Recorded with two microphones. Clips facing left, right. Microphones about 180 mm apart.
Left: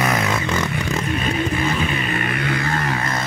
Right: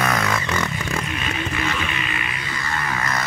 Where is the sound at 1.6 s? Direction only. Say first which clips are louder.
Left 4 dB; 45° left (ahead or behind); by 2.8 s 60° left (ahead or behind).